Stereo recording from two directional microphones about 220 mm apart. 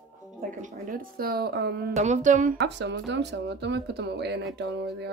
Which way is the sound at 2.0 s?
35° right (ahead or behind).